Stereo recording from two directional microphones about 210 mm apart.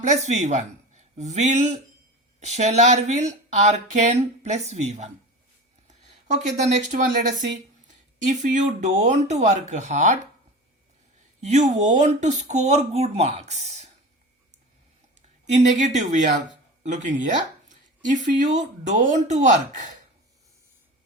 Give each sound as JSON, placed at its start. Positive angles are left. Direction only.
{"t": 0.0, "sound": "speech", "side_deg": -35}
{"t": 11.3, "sound": "speech", "side_deg": -30}
{"t": 15.5, "sound": "speech", "side_deg": -35}